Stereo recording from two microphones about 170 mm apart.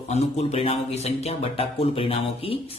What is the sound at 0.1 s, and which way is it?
Speech, 40° left (ahead or behind).